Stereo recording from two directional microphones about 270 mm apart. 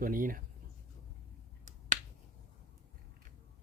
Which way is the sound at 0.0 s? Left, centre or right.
Right.